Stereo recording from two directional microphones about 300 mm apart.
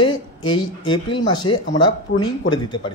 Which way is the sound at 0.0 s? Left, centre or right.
Centre.